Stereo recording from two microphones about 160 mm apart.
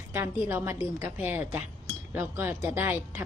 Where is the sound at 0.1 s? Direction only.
15° right (ahead or behind).